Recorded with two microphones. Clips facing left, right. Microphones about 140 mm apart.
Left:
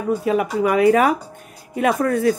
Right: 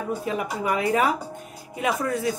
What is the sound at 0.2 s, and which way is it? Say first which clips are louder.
Speech: left 8 dB; 70° left (ahead or behind).